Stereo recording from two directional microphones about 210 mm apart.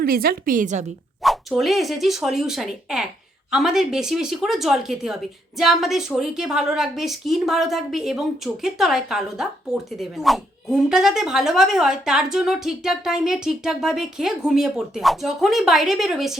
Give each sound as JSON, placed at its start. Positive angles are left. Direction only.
{"t": 0.0, "sound": "a woman's voice", "side_deg": -45}
{"t": 1.2, "sound": "speech", "side_deg": 0}